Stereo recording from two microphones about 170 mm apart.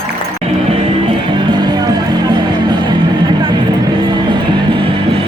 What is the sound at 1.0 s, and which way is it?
Music, 25° right (ahead or behind).